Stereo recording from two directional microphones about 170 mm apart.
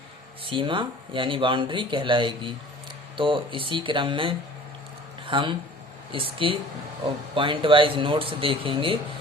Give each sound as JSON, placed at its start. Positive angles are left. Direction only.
{"t": 0.4, "sound": "speech", "side_deg": -30}